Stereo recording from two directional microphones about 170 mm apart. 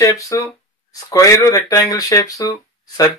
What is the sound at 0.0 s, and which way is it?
Speech, 20° left (ahead or behind).